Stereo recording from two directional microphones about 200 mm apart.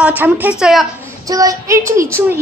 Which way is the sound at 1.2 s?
15° right (ahead or behind).